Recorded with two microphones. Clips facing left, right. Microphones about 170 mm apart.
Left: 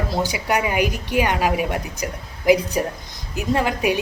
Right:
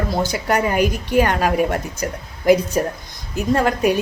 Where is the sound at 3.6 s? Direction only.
45° right (ahead or behind).